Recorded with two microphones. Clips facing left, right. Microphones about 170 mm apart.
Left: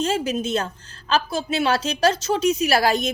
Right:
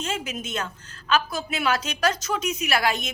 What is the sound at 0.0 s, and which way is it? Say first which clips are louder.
A woman's voice: left 8 dB; 35° left (ahead or behind).